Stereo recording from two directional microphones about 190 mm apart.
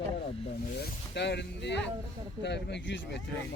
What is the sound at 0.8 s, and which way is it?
Speech, 65° left (ahead or behind).